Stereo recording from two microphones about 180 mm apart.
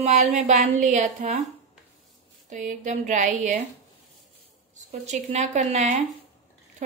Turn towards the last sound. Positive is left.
turn(degrees=-40)  # may be behind; listen again after turning